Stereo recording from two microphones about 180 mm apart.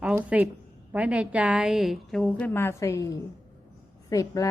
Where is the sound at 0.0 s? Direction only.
5° right (ahead or behind).